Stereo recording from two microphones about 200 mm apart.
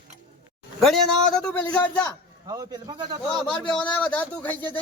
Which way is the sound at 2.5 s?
20° right (ahead or behind).